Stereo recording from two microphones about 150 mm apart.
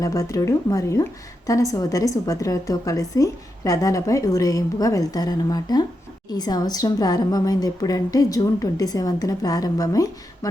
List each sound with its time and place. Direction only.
0.0 s a woman's voice: 20° left (ahead or behind)